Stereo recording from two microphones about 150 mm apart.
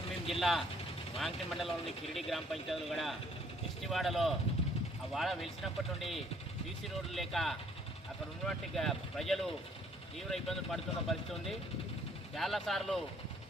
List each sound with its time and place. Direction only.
0.3 s speech: centre (ahead or behind)